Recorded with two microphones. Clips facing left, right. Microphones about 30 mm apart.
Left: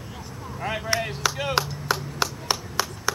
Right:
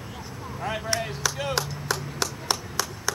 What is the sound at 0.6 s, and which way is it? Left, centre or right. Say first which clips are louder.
Chop: left 2 dB; centre.